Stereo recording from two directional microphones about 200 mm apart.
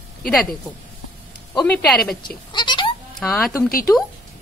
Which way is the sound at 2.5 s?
25° left (ahead or behind).